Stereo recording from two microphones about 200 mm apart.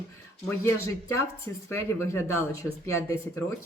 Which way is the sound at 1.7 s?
10° left (ahead or behind).